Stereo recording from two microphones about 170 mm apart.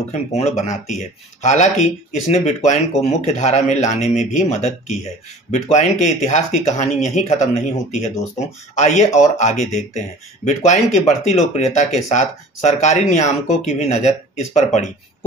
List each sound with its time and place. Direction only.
0.1 s speech: 40° left (ahead or behind)